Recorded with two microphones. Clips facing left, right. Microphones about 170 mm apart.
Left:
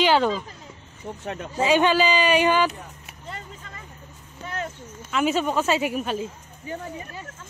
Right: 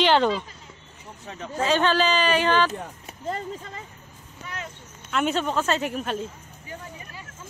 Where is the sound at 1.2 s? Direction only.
65° left (ahead or behind).